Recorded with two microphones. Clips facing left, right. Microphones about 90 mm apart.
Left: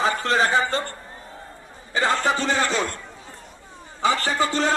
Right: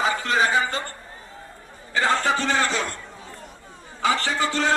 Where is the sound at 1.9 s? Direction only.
20° left (ahead or behind).